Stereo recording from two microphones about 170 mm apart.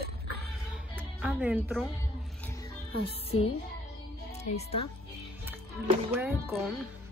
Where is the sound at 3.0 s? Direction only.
35° left (ahead or behind).